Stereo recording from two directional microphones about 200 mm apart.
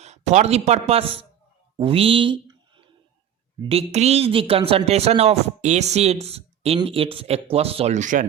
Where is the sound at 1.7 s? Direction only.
30° right (ahead or behind).